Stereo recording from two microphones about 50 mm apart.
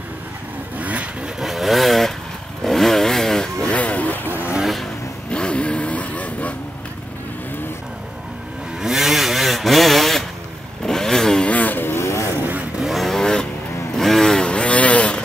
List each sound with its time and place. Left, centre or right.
0.7 s vehicle: right
1.4 s vehicle: centre
2.6 s motorcycle: centre
3.6 s vehicle: left
5.3 s vehicle: left
8.8 s a sound: centre
10.9 s motorcycle: centre
11.4 s vehicle: left
12.0 s vehicle: left
12.8 s vehicle: centre
13.2 s vehicle: centre